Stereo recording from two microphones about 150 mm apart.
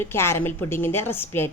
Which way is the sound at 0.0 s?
15° left (ahead or behind).